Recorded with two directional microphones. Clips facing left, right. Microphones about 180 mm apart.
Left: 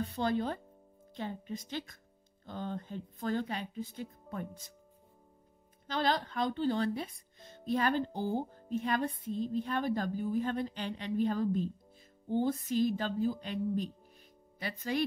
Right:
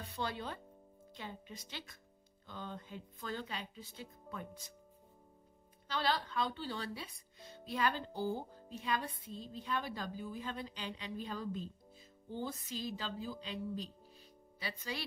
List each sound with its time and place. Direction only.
0.0 s a woman's voice: 50° left (ahead or behind)
5.9 s a woman's voice: 45° left (ahead or behind)
8.1 s speech: 20° left (ahead or behind)
8.4 s a woman's voice: 50° left (ahead or behind)